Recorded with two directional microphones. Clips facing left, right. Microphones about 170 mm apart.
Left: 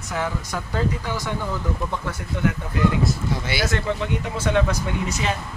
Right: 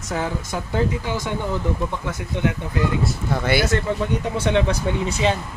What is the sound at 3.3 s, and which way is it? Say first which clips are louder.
Speech: right 6 dB; 60° right (ahead or behind).